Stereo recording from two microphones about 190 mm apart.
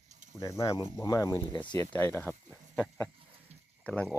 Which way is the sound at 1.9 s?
10° left (ahead or behind).